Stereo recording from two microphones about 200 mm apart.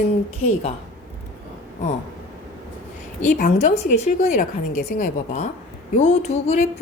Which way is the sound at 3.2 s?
40° left (ahead or behind).